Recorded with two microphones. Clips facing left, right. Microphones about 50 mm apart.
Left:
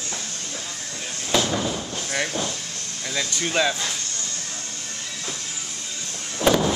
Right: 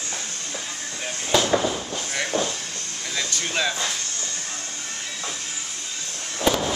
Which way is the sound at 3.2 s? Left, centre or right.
Centre.